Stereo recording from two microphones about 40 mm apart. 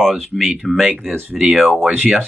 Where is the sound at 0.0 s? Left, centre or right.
Centre.